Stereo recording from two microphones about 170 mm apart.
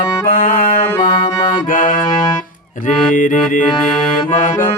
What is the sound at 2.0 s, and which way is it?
Music, 25° left (ahead or behind).